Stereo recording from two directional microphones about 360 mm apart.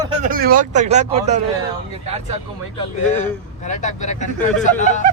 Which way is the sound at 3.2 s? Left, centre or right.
Centre.